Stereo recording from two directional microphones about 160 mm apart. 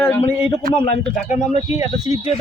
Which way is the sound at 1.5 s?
40° left (ahead or behind).